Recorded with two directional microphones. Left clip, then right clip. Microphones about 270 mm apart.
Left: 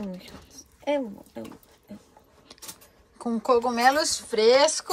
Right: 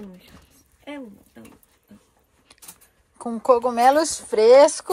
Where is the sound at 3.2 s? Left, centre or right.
Centre.